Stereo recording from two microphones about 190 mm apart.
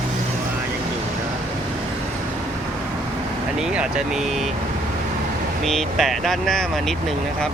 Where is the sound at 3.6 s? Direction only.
5° right (ahead or behind).